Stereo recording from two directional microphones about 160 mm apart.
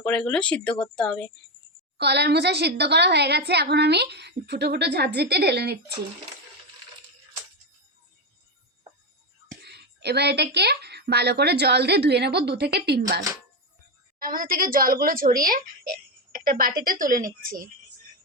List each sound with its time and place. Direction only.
0.0 s a woman's voice: 5° left (ahead or behind)
2.0 s a woman's voice: 90° right
9.6 s a woman's voice: 90° right
14.2 s a woman's voice: 60° right (ahead or behind)